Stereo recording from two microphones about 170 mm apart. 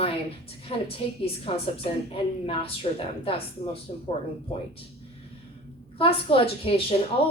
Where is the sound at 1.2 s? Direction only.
35° left (ahead or behind).